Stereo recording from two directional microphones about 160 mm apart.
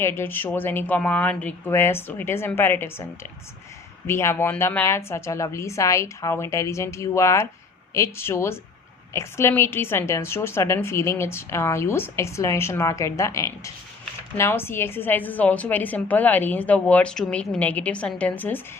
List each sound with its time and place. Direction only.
0.0 s a woman's voice: 15° left (ahead or behind)